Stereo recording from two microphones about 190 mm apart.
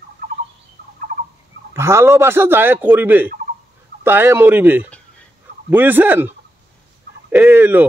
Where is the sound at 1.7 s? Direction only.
15° right (ahead or behind).